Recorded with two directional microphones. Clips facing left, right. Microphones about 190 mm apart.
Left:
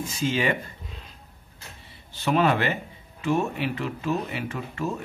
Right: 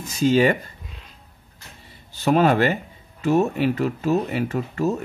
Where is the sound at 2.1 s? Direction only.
40° right (ahead or behind).